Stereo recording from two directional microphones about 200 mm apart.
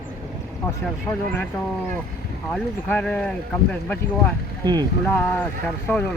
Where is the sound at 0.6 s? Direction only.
10° left (ahead or behind).